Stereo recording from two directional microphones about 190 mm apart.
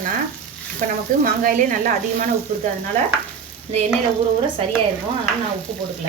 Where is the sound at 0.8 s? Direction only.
45° right (ahead or behind).